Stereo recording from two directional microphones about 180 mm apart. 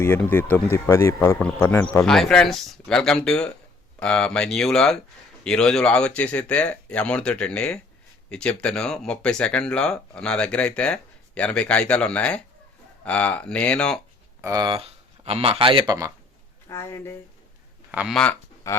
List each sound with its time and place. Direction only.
0.0 s speech: 10° left (ahead or behind)
14.4 s speech: 20° right (ahead or behind)
16.6 s speech: 15° left (ahead or behind)
17.9 s speech: centre (ahead or behind)
18.7 s speech: 15° left (ahead or behind)